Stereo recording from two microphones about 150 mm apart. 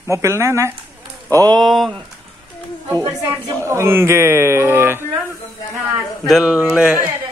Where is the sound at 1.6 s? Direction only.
Centre (ahead or behind).